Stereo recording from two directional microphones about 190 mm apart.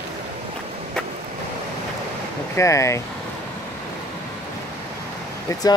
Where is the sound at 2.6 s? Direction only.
15° left (ahead or behind).